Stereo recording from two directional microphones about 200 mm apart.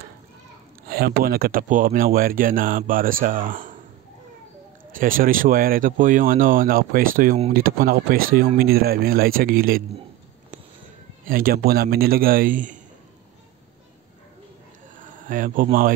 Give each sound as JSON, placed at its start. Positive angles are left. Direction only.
{"t": 0.8, "sound": "speech", "side_deg": -50}
{"t": 4.9, "sound": "speech", "side_deg": -45}
{"t": 11.2, "sound": "speech", "side_deg": -45}
{"t": 15.0, "sound": "speech", "side_deg": -40}